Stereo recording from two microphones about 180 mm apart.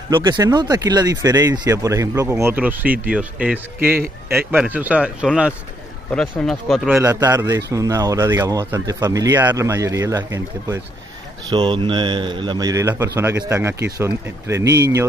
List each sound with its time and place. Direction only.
0.1 s speech: 25° right (ahead or behind); by 6.9 s centre (ahead or behind)
6.9 s speech: 20° right (ahead or behind)
11.5 s speech: 25° right (ahead or behind)